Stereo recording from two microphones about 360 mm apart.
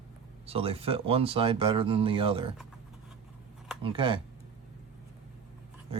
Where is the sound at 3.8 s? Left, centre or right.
Centre.